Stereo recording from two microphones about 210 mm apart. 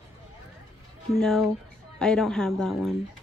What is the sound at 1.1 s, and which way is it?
A woman's voice, centre (ahead or behind).